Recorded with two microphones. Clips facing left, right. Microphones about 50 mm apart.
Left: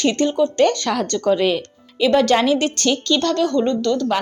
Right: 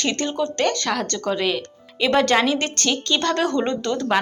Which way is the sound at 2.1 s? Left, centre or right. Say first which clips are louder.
Left 3 dB; centre.